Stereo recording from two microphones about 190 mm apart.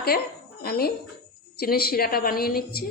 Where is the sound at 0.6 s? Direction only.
55° left (ahead or behind).